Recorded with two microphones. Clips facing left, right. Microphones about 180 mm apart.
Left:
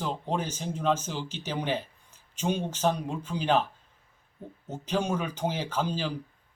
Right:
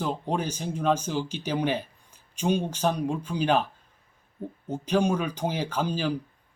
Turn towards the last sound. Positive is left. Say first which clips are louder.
# right 2 dB
turn(degrees=-15)  # may be behind; listen again after turning